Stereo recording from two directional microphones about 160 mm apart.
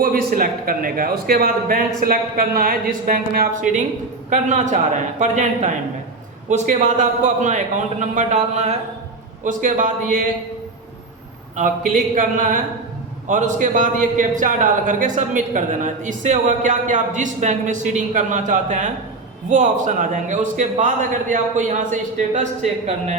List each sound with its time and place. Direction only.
0.0 s a man's voice: 65° right (ahead or behind)
11.5 s a man's voice: 55° right (ahead or behind)